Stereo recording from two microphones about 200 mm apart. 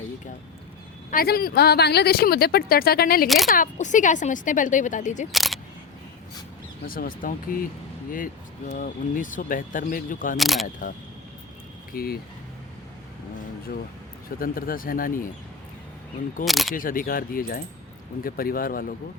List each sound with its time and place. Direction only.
1.1 s speech: 50° left (ahead or behind)
3.2 s speech: centre (ahead or behind)
3.5 s speech: 40° left (ahead or behind)
5.3 s speech: centre (ahead or behind)
6.8 s speech: 45° left (ahead or behind)
10.3 s speech: centre (ahead or behind)
11.9 s speech: 50° left (ahead or behind)
14.3 s speech: 45° left (ahead or behind)
16.5 s speech: centre (ahead or behind)
16.7 s speech: 45° left (ahead or behind)